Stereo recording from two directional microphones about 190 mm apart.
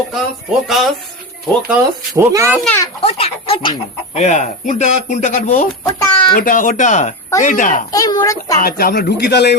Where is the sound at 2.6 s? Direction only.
15° left (ahead or behind).